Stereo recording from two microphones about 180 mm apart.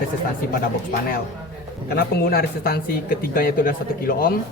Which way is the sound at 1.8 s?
60° left (ahead or behind).